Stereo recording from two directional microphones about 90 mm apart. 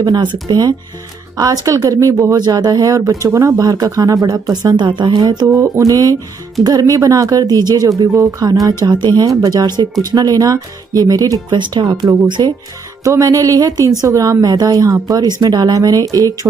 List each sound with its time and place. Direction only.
0.0 s speech: 50° right (ahead or behind)
11.5 s speech: 60° right (ahead or behind)
13.0 s speech: 35° right (ahead or behind)